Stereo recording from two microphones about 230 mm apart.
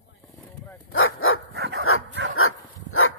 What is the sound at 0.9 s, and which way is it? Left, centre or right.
Dog, left.